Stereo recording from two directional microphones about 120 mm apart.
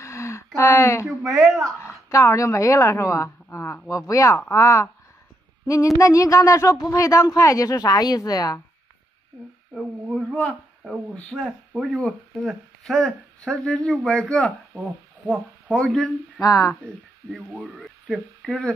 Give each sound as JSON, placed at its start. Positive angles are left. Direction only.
{"t": 0.0, "sound": "a sound", "side_deg": 25}
{"t": 0.6, "sound": "speech", "side_deg": 25}
{"t": 1.0, "sound": "speech", "side_deg": 0}
{"t": 2.0, "sound": "speech", "side_deg": 25}
{"t": 3.4, "sound": "a sound", "side_deg": 20}
{"t": 3.9, "sound": "speech", "side_deg": 25}
{"t": 5.9, "sound": "speech", "side_deg": 25}
{"t": 9.8, "sound": "speech", "side_deg": -10}
{"t": 11.1, "sound": "speech", "side_deg": 10}
{"t": 11.4, "sound": "speech", "side_deg": -5}
{"t": 16.3, "sound": "speech", "side_deg": 30}
{"t": 17.6, "sound": "speech", "side_deg": 0}